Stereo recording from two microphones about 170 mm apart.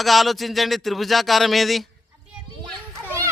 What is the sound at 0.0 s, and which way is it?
Speech, centre (ahead or behind).